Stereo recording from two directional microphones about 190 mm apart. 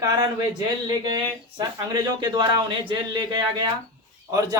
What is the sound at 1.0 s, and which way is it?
A man's voice, 25° right (ahead or behind).